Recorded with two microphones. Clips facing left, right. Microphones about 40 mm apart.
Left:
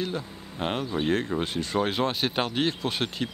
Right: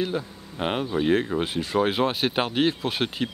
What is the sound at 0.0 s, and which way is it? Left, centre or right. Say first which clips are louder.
Speech: right 4 dB; centre.